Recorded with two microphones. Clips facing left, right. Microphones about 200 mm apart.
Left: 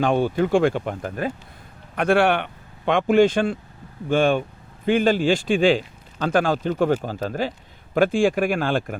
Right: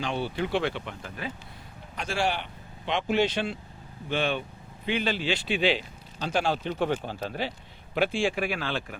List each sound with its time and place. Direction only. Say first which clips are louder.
0.0 s speech: left 10 dB; 50° left (ahead or behind)
2.0 s speech: left 11 dB; 60° left (ahead or behind)